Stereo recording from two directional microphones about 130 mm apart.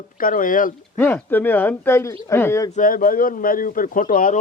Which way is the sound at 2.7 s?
90° left.